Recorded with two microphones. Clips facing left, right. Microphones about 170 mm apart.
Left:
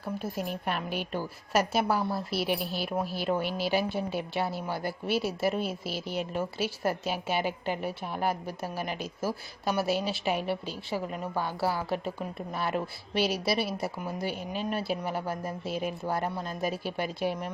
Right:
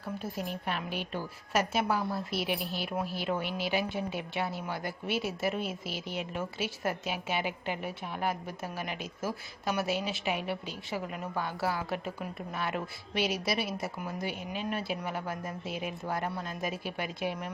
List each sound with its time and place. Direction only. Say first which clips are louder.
0.3 s a woman's voice: left 2 dB; 50° left (ahead or behind)
1.1 s a woman's voice: left 3 dB; 40° left (ahead or behind)